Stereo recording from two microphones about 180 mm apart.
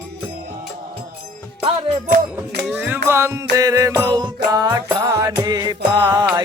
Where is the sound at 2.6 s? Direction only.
10° right (ahead or behind).